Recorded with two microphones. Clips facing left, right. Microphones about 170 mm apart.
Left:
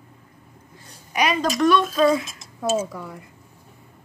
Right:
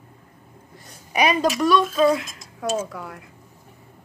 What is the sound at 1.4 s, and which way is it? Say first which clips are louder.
Speech: even; 5° right (ahead or behind).